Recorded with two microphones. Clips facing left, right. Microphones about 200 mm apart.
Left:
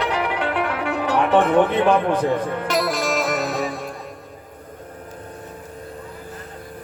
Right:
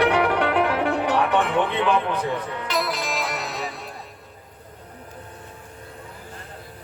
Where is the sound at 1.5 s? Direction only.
50° left (ahead or behind).